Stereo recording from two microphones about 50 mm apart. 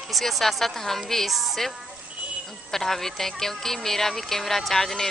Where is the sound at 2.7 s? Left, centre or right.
Centre.